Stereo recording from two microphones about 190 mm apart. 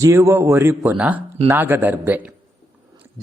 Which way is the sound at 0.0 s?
15° right (ahead or behind).